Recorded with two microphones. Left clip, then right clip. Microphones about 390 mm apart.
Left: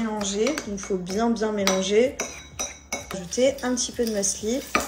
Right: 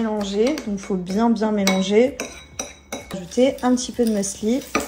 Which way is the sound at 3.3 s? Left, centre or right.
Right.